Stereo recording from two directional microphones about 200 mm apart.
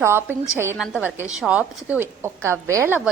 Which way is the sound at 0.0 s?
10° right (ahead or behind).